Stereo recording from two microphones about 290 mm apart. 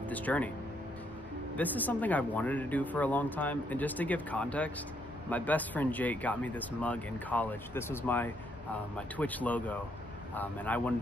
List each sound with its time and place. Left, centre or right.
0.1 s speech: centre
1.6 s speech: centre